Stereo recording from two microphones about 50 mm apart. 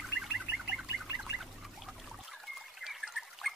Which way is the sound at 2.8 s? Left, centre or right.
Centre.